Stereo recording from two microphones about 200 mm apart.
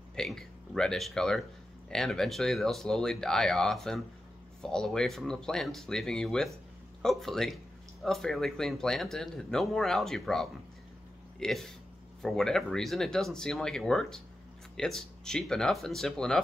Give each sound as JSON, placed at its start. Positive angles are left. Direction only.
{"t": 0.1, "sound": "speech", "side_deg": 0}